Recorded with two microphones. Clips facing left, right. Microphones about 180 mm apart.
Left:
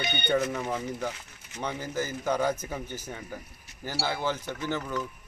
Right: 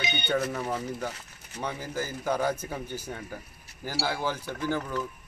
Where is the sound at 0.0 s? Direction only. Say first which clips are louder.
Even; 55° left (ahead or behind).